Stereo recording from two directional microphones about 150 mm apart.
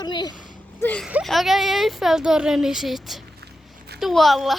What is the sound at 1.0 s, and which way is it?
Speech, centre (ahead or behind).